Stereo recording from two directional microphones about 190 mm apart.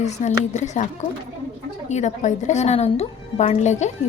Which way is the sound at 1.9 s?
40° left (ahead or behind).